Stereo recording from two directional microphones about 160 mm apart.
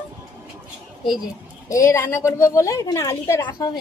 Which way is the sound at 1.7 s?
20° left (ahead or behind).